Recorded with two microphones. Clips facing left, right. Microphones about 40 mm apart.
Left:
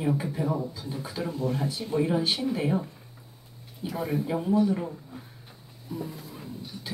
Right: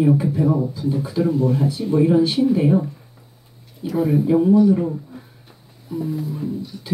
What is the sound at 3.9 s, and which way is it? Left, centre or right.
Speech, centre.